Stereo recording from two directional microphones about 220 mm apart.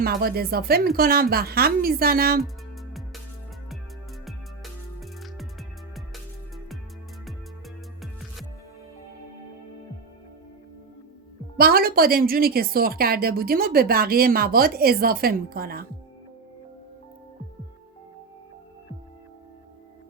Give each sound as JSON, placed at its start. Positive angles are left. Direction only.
{"t": 0.0, "sound": "a woman's voice", "side_deg": -45}
{"t": 4.3, "sound": "music", "side_deg": 0}
{"t": 11.5, "sound": "a woman's voice", "side_deg": -40}